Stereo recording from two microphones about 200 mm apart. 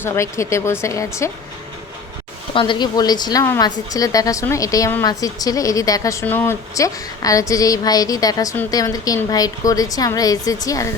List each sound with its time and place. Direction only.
0.0 s a woman's voice: 15° left (ahead or behind)
2.6 s a woman's voice: 25° left (ahead or behind)